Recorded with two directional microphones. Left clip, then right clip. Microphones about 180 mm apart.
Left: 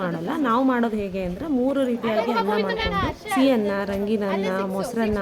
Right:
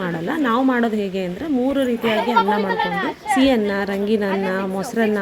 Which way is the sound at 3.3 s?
15° right (ahead or behind).